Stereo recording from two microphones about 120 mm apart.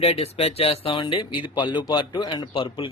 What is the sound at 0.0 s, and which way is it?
Speech, 60° left (ahead or behind).